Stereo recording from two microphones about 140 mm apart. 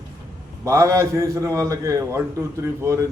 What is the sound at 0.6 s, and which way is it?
A man's voice, 25° right (ahead or behind).